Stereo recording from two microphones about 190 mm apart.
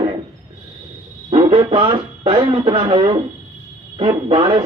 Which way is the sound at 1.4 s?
30° right (ahead or behind).